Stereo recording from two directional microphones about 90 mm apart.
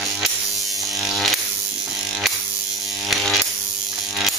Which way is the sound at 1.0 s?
Centre (ahead or behind).